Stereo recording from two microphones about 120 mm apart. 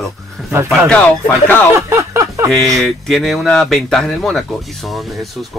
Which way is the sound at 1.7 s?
25° right (ahead or behind).